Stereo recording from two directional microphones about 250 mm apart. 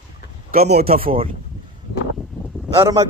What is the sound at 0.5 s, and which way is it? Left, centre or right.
Speech, right.